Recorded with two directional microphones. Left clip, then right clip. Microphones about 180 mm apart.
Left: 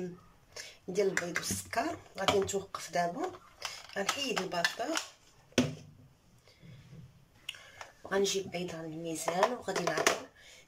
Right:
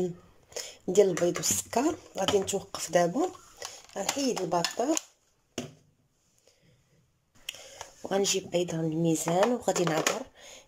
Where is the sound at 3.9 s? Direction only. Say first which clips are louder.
Right 3 dB; 40° right (ahead or behind).